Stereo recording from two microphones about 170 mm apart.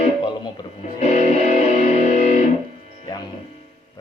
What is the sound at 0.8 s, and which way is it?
Music, 40° left (ahead or behind).